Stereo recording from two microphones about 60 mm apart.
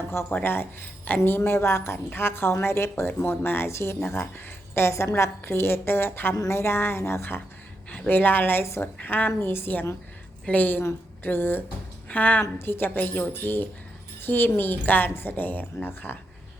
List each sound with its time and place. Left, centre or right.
0.3 s a woman's voice: left
1.5 s a woman's voice: left
6.5 s a woman's voice: left
7.9 s a woman's voice: left
12.5 s a woman's voice: left